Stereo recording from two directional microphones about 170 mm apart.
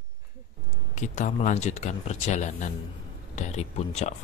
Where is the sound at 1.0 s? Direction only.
45° left (ahead or behind).